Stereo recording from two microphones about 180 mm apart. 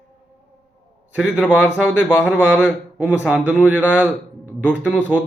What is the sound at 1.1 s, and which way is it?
A man's voice, 5° right (ahead or behind).